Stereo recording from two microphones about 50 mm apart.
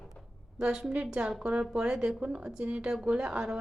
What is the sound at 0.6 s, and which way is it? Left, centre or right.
A woman's voice, centre.